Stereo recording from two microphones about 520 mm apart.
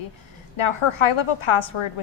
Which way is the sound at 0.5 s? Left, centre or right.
Left.